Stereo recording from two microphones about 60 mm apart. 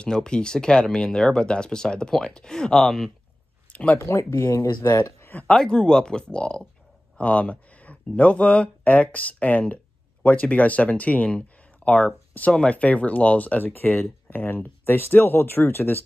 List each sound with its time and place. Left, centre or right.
0.0 s speech: centre
3.7 s speech: left
4.0 s speech: left
5.6 s speech: centre
11.4 s a sound: left
12.5 s speech: left